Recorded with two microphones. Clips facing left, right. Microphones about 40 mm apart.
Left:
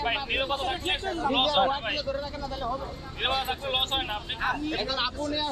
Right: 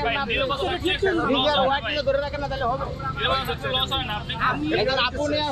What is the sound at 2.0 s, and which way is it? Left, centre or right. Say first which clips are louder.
Speech: right 8 dB; right.